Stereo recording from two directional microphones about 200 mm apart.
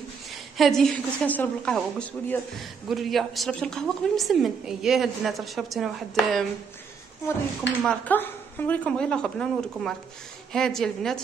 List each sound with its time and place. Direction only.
0.3 s a woman's voice: centre (ahead or behind)
7.6 s a woman's voice: 5° left (ahead or behind)